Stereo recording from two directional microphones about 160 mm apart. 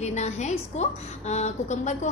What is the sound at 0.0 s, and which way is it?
A woman's voice, 45° left (ahead or behind).